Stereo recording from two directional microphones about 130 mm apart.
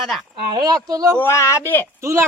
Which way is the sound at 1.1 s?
20° left (ahead or behind).